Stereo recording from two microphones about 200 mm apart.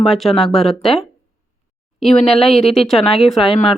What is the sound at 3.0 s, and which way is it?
Speech, 30° left (ahead or behind).